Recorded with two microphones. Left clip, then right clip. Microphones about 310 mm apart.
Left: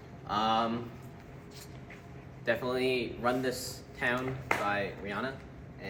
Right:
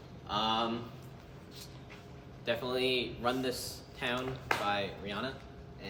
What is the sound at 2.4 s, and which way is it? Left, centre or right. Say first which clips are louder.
A man's voice: left 2 dB; centre.